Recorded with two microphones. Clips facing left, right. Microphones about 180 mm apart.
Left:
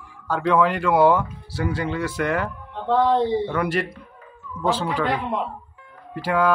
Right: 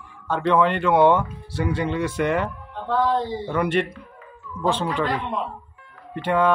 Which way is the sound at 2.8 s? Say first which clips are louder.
Left 3 dB; 25° left (ahead or behind).